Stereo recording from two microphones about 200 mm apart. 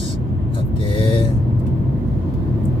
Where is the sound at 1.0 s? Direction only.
25° left (ahead or behind).